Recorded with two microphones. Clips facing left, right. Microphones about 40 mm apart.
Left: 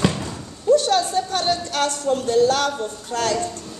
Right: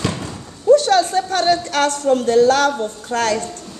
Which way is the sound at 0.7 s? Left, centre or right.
Right.